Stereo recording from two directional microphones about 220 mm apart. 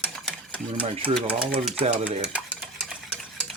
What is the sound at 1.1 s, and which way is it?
Speech, centre (ahead or behind).